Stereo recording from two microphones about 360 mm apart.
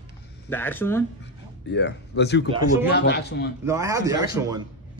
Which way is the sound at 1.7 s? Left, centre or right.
Left.